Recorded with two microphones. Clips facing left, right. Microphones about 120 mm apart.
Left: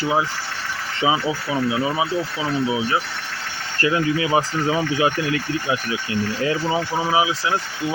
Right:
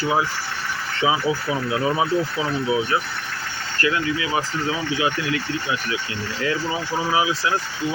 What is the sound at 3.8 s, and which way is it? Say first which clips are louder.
Speech: left 3 dB; 30° left (ahead or behind).